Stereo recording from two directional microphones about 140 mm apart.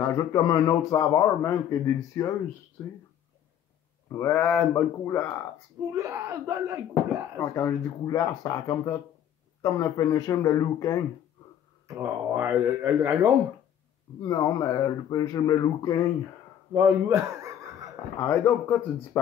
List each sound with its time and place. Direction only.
0.0 s speech: 25° left (ahead or behind)
4.1 s speech: 15° left (ahead or behind)
5.9 s speech: 20° right (ahead or behind)
7.3 s speech: 20° left (ahead or behind)
11.9 s speech: 20° right (ahead or behind)
14.2 s speech: 25° left (ahead or behind)
16.7 s chuckle: 20° right (ahead or behind)
18.3 s speech: 10° left (ahead or behind)